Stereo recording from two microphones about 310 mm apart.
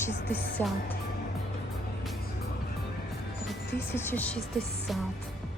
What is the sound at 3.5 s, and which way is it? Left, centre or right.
Speech, centre.